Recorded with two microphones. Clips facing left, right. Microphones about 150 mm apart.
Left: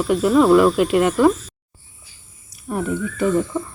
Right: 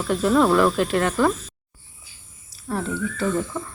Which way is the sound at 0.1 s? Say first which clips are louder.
Left 4 dB; 10° left (ahead or behind).